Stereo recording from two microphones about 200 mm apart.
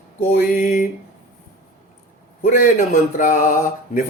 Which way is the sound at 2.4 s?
40° left (ahead or behind).